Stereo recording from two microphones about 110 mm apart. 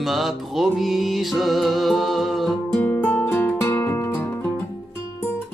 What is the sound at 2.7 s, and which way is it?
Music, 15° left (ahead or behind).